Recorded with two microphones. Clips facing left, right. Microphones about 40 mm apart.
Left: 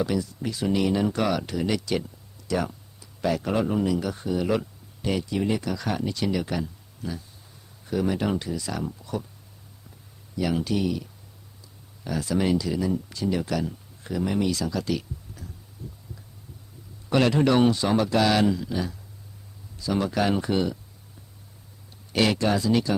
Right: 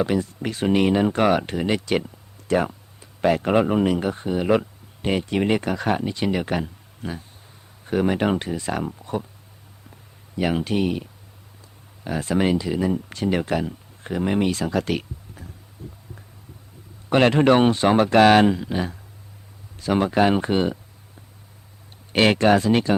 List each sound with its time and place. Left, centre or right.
0.0 s speech: right
6.0 s speech: right
10.3 s speech: right
15.8 s heart sounds: right
17.1 s speech: right
20.1 s speech: right
22.1 s speech: right